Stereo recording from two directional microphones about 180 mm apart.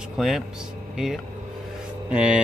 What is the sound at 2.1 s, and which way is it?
Speech, 5° right (ahead or behind).